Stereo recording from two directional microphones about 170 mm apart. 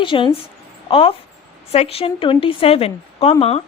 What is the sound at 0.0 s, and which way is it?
A woman's voice, 30° left (ahead or behind).